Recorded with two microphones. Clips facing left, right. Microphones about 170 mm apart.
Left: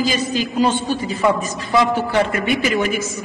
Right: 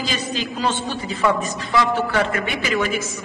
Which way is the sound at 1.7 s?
20° left (ahead or behind).